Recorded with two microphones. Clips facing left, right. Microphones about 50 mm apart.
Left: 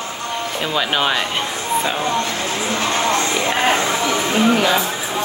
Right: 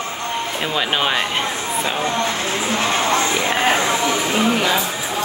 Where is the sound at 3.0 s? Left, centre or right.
Centre.